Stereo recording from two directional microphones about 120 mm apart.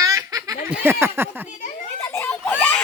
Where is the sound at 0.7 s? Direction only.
15° right (ahead or behind).